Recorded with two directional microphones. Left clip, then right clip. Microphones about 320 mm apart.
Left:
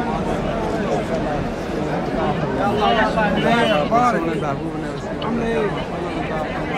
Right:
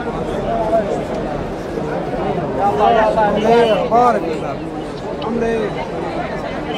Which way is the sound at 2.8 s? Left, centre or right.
Centre.